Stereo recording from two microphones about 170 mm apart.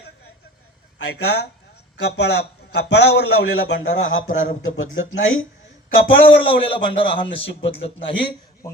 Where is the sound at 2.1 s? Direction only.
85° left.